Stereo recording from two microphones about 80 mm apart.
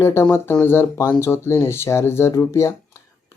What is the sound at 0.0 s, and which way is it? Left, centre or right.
Speech, left.